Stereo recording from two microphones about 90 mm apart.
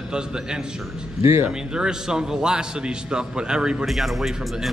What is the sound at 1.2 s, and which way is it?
Speech, 30° right (ahead or behind).